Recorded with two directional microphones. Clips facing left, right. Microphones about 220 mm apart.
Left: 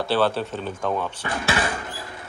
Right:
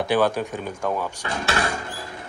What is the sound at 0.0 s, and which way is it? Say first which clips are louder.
Speech: right 1 dB; 15° right (ahead or behind).